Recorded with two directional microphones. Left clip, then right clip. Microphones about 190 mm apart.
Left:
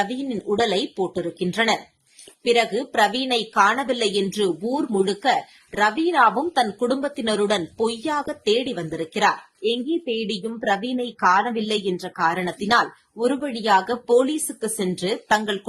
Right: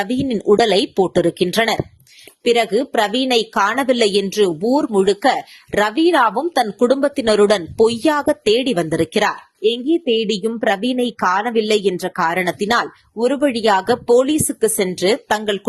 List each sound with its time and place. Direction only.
0.0 s speech: 45° right (ahead or behind)
2.4 s a woman's voice: 35° right (ahead or behind)